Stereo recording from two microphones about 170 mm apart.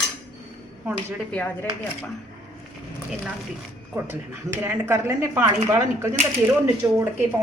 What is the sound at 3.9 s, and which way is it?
Speech, 15° right (ahead or behind).